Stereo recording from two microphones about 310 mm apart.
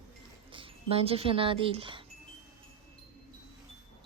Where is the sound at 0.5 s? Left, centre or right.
Centre.